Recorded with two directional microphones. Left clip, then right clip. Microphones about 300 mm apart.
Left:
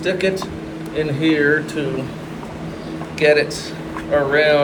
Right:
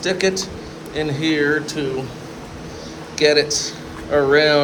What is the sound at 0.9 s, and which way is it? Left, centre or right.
Speech, right.